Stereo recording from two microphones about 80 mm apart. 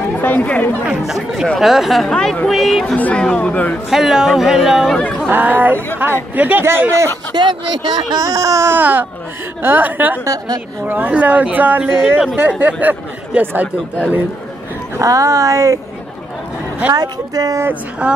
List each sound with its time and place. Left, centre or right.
0.2 s speech: centre
1.0 s speech: centre
3.0 s speech: centre
3.9 s speech: centre
4.9 s speech: centre
5.2 s speech: right
7.3 s speech: right
8.7 s speech: right
10.2 s speech: right
10.9 s speech: right
15.0 s speech: right
16.9 s speech: right
18.0 s a woman's voice: centre